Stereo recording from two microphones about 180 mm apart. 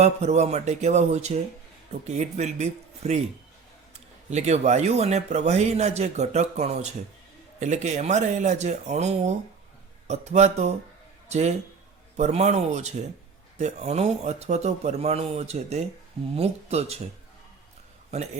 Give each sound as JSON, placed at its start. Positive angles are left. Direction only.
{"t": 0.0, "sound": "speech", "side_deg": -40}
{"t": 4.3, "sound": "speech", "side_deg": -40}